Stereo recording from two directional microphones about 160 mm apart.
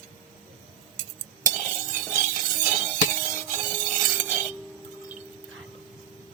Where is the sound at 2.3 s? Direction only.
50° right (ahead or behind).